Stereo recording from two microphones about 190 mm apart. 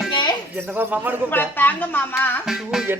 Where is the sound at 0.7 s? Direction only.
10° right (ahead or behind).